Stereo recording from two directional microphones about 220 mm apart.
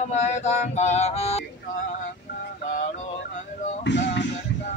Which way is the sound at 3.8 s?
50° left (ahead or behind).